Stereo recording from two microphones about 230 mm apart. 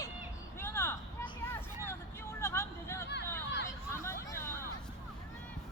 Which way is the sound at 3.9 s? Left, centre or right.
Centre.